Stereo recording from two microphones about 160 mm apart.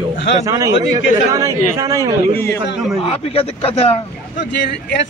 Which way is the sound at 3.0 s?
35° left (ahead or behind).